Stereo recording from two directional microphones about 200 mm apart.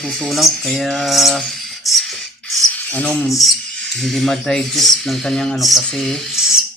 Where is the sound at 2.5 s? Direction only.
5° left (ahead or behind).